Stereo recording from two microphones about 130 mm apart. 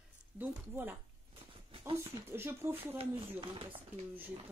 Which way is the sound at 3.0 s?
45° right (ahead or behind).